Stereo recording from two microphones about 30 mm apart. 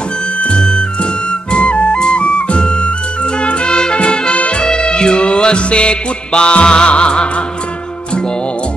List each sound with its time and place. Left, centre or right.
0.6 s music: left
1.5 s music: left